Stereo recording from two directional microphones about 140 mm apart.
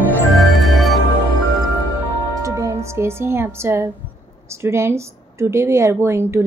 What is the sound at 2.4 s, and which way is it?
Speech, 20° right (ahead or behind).